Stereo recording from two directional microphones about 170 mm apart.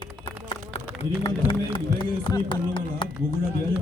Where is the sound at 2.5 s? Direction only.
30° left (ahead or behind).